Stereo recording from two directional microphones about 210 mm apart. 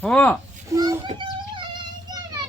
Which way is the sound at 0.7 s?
15° right (ahead or behind).